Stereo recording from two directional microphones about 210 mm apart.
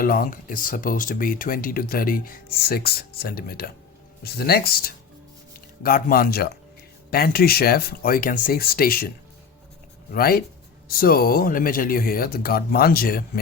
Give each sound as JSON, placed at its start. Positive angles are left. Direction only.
{"t": 0.0, "sound": "speech", "side_deg": 45}